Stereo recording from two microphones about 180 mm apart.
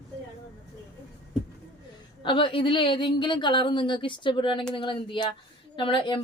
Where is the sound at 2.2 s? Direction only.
30° left (ahead or behind).